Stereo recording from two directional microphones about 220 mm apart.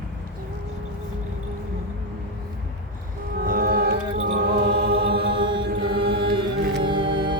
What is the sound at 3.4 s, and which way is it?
Music, 40° right (ahead or behind).